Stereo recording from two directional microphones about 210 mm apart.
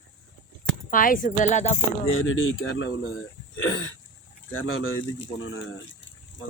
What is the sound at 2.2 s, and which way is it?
Speech, 75° left (ahead or behind).